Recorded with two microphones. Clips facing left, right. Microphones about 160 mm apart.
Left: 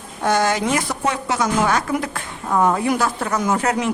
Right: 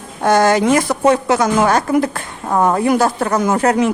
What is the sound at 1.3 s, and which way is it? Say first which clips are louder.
Speech: right 5 dB; 65° right (ahead or behind).